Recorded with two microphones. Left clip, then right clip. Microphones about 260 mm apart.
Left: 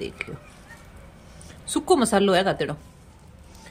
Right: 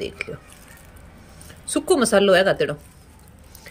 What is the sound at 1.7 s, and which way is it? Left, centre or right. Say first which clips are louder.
Speech: right 2 dB; centre.